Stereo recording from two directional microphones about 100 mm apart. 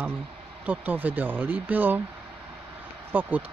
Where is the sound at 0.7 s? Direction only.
15° right (ahead or behind).